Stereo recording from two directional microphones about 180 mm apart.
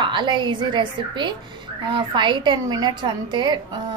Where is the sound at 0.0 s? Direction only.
25° right (ahead or behind).